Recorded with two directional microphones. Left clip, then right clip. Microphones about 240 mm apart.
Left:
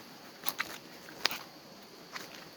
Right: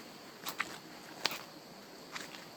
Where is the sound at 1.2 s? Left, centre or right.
Left.